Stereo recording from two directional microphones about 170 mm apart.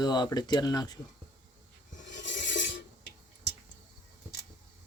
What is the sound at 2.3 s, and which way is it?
Filing, 90° left.